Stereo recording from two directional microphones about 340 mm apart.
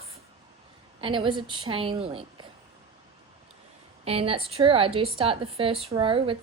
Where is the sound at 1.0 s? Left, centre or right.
Centre.